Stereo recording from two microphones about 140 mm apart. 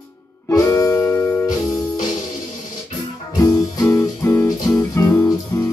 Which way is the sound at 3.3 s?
25° left (ahead or behind).